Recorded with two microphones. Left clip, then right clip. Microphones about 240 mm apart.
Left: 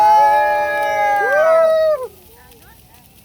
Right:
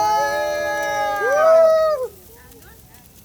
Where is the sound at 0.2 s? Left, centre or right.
Left.